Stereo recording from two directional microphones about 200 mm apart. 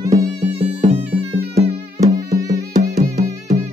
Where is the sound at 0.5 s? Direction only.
30° right (ahead or behind).